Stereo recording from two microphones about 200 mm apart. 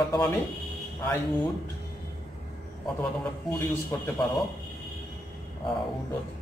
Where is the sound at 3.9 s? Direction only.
10° left (ahead or behind).